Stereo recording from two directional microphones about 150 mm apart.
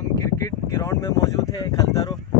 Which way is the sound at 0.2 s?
20° left (ahead or behind).